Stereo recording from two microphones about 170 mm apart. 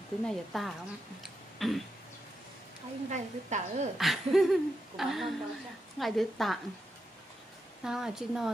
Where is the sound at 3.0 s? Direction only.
45° right (ahead or behind).